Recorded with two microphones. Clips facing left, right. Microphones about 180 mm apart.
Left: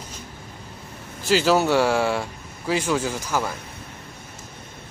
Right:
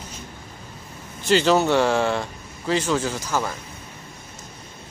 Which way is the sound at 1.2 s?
5° left (ahead or behind).